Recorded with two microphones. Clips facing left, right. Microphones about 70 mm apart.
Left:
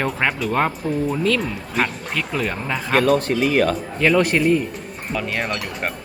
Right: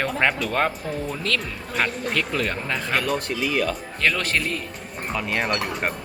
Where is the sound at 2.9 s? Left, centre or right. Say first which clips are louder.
Left 9 dB; left.